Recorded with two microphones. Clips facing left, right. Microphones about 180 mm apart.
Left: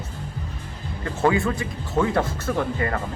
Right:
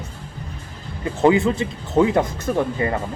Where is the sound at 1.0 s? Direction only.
20° right (ahead or behind).